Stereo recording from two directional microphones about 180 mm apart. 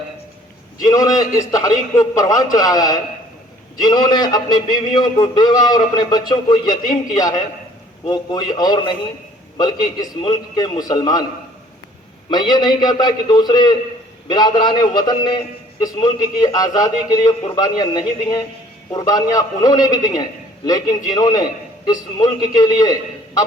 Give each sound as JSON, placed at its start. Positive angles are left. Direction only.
{"t": 0.9, "sound": "a man's voice", "side_deg": 20}
{"t": 12.3, "sound": "a man's voice", "side_deg": 25}